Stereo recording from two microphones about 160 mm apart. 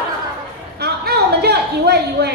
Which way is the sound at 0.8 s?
90° right.